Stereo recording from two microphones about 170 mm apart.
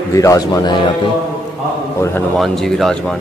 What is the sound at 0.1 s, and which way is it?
Speech, 20° left (ahead or behind).